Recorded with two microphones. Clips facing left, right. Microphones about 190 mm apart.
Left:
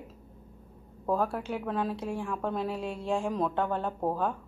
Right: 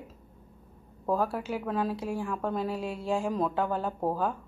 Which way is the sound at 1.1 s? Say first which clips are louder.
Even; centre (ahead or behind).